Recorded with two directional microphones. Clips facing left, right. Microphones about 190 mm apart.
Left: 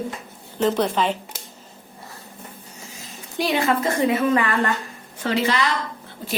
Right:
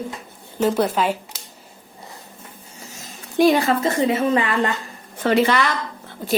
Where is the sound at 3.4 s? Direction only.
40° right (ahead or behind).